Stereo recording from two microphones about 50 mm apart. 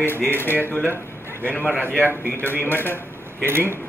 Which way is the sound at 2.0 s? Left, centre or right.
Right.